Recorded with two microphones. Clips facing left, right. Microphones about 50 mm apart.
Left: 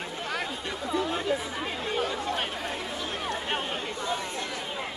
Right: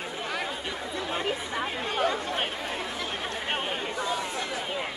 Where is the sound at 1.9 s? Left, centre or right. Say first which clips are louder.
Right 3 dB; right.